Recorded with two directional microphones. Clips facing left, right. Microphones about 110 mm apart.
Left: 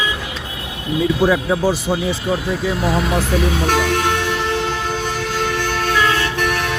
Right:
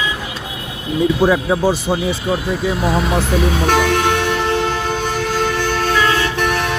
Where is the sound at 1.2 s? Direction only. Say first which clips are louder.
Right 1 dB; 25° right (ahead or behind).